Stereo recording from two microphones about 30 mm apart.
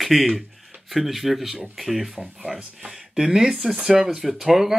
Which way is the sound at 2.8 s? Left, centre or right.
Right.